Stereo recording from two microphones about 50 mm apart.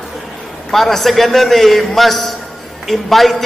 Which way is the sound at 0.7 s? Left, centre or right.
Centre.